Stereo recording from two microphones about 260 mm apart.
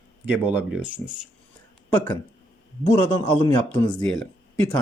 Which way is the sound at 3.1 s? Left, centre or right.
Centre.